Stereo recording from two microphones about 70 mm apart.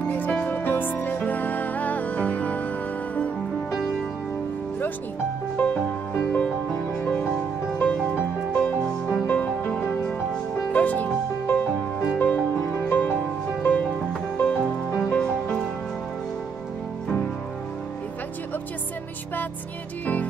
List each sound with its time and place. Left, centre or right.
0.1 s music: centre
5.6 s music: left
7.1 s music: centre